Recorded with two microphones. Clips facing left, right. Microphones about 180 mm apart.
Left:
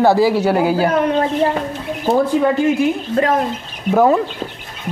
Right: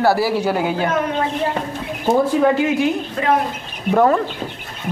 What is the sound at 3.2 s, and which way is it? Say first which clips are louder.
Speech: left 4 dB; 45° left (ahead or behind).